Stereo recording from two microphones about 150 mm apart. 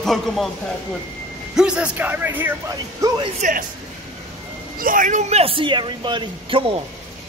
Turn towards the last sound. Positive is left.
turn(degrees=-35)  # may be behind; listen again after turning